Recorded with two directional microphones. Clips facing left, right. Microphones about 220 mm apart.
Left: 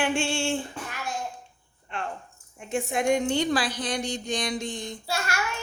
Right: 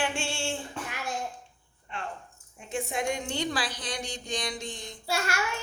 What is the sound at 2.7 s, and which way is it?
A woman's voice, 50° left (ahead or behind).